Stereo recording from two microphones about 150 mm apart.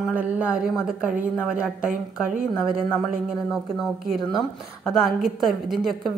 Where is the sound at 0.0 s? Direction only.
10° right (ahead or behind).